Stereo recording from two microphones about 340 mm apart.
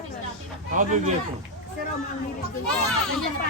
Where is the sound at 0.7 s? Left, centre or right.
Right.